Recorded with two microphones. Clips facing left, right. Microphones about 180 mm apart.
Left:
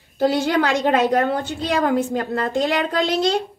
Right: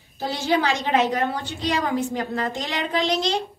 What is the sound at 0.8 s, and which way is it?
A woman's voice, 55° left (ahead or behind).